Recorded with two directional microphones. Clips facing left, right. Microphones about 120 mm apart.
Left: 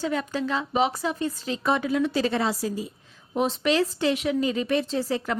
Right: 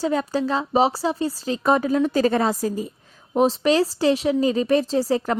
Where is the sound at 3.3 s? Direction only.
35° right (ahead or behind).